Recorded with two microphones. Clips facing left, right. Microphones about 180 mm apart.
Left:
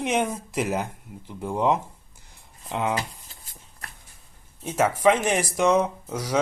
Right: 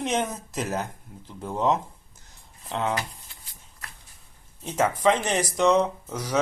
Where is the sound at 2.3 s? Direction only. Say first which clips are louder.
Left 1 dB; 10° left (ahead or behind).